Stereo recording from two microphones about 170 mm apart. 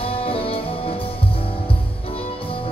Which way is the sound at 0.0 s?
35° left (ahead or behind).